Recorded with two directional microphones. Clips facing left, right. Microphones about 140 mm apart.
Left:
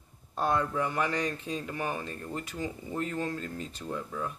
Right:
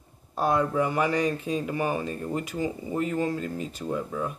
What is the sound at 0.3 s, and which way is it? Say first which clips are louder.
A man's voice: right 4 dB; 10° right (ahead or behind).